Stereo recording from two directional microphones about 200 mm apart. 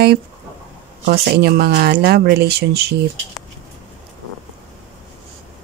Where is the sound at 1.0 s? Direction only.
50° right (ahead or behind).